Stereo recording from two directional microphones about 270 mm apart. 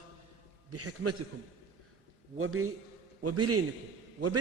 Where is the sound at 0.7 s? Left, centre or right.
Right.